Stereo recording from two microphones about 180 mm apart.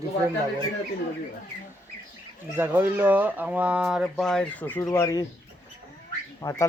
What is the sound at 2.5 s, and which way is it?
Speech, 10° right (ahead or behind).